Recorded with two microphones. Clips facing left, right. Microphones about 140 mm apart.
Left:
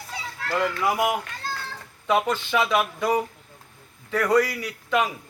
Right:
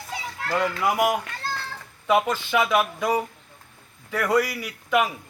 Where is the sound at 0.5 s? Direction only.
20° right (ahead or behind).